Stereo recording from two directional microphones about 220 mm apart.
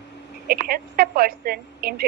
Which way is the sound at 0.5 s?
45° right (ahead or behind).